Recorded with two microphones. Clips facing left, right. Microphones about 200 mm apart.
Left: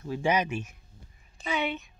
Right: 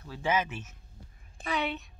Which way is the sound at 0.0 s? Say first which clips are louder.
Left 3 dB; 15° left (ahead or behind).